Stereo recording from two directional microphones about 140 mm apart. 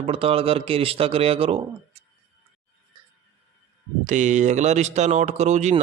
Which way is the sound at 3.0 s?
30° right (ahead or behind).